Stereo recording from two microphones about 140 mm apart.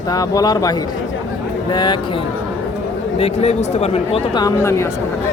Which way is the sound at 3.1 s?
50° left (ahead or behind).